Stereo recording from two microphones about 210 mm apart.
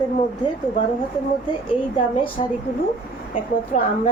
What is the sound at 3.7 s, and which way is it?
Speech, 35° left (ahead or behind).